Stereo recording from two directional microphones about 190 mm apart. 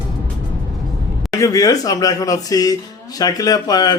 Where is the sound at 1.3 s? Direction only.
20° left (ahead or behind).